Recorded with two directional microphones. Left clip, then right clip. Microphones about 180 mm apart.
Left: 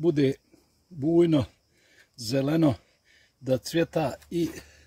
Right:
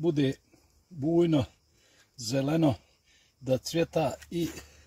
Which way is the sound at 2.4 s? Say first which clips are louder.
Left 2 dB; 30° left (ahead or behind).